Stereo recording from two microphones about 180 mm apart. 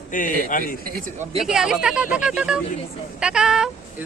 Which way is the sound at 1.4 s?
5° right (ahead or behind).